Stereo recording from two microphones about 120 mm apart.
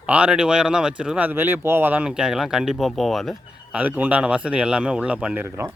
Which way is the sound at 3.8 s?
15° right (ahead or behind).